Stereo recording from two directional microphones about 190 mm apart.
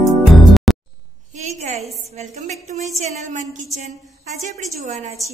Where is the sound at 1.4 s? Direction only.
40° right (ahead or behind).